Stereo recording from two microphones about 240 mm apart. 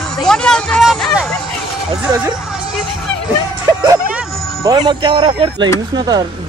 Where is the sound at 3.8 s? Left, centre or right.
Centre.